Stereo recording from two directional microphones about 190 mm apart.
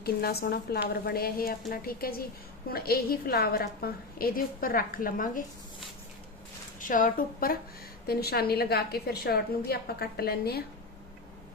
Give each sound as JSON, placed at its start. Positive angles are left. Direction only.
{"t": 0.0, "sound": "a woman's voice", "side_deg": 55}
{"t": 6.7, "sound": "a woman's voice", "side_deg": 45}